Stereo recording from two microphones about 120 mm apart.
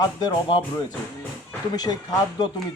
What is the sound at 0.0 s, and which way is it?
Speech, 35° left (ahead or behind).